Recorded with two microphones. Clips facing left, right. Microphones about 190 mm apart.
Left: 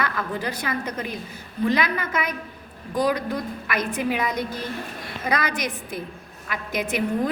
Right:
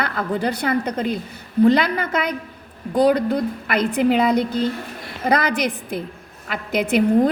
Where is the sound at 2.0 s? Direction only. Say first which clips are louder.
Right 5 dB; 70° right (ahead or behind).